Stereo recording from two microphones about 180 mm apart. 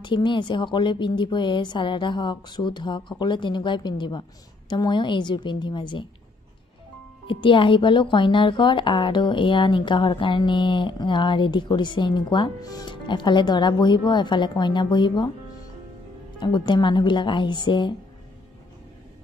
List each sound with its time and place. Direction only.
0.0 s speech: 25° left (ahead or behind)
7.2 s speech: 25° left (ahead or behind)
16.3 s speech: 25° left (ahead or behind)